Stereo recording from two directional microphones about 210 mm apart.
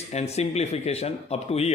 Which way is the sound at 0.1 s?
30° left (ahead or behind).